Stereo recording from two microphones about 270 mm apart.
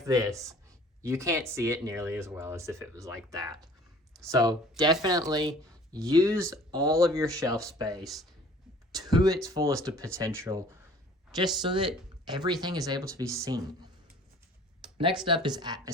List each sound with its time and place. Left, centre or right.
0.0 s speech: centre
8.0 s speech: centre
9.0 s speech: centre
15.2 s speech: centre